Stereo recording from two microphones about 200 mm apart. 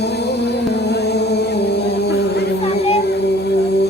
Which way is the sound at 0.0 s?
55° left (ahead or behind).